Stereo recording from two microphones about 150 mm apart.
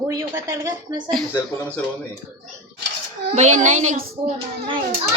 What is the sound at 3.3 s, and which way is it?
Speech, 50° right (ahead or behind).